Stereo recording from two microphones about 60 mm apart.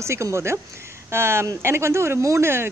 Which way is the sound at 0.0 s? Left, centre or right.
Right.